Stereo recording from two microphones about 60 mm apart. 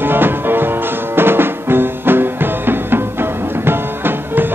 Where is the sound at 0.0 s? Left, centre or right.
Right.